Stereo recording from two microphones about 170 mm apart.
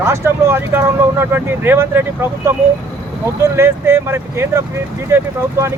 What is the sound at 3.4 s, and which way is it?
Speech, 15° right (ahead or behind).